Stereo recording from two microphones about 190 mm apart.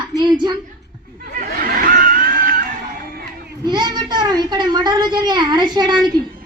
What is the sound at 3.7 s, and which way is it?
A woman's voice, 20° right (ahead or behind).